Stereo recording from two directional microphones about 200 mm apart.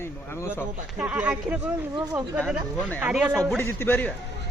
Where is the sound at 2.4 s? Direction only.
5° left (ahead or behind).